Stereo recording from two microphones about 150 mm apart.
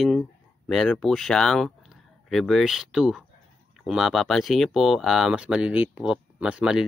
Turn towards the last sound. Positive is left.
turn(degrees=-5)  # may be behind; listen again after turning